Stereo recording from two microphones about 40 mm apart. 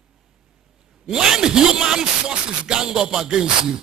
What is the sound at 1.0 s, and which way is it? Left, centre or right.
Speech, centre.